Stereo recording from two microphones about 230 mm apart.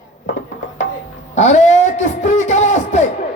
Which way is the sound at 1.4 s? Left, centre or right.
Left.